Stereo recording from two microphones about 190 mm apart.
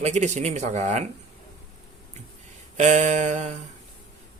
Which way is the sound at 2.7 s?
40° right (ahead or behind).